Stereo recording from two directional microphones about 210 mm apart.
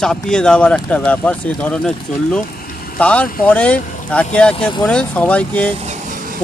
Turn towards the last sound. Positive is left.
turn(degrees=-40)  # may be behind; listen again after turning